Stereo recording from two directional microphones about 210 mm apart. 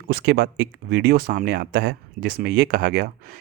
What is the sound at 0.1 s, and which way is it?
Speech, 50° right (ahead or behind).